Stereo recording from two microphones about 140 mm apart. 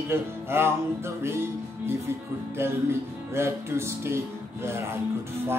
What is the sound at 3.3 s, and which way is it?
Music, 20° right (ahead or behind).